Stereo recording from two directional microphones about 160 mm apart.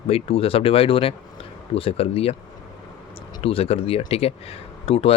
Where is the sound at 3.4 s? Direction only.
35° left (ahead or behind).